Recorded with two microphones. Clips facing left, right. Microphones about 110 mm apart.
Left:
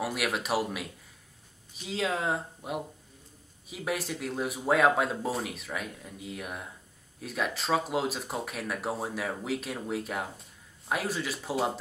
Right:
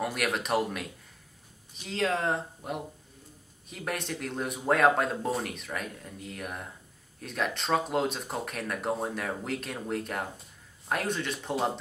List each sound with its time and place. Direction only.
0.0 s speech: 5° left (ahead or behind)